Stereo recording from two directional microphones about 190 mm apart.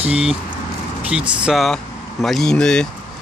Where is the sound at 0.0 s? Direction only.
5° right (ahead or behind).